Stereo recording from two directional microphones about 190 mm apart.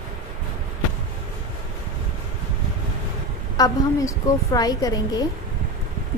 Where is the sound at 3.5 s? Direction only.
20° left (ahead or behind).